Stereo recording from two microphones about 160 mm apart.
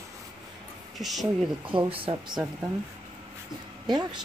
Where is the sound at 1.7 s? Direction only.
35° right (ahead or behind).